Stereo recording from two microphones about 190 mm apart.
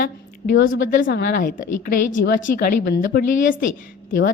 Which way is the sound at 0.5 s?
90° left.